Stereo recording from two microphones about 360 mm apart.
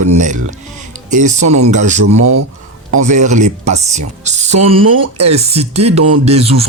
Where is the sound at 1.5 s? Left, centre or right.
Centre.